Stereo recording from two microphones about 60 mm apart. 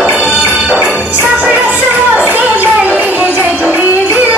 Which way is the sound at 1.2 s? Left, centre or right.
Right.